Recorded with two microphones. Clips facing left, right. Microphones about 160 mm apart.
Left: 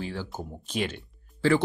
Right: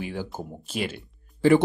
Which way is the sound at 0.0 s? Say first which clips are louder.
Right 2 dB; 15° right (ahead or behind).